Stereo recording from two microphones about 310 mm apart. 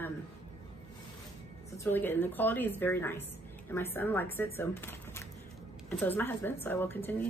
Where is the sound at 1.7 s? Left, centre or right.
Centre.